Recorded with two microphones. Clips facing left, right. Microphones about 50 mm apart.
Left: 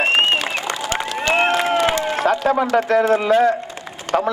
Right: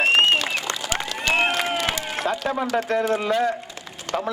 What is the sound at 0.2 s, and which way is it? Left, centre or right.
Applause, centre.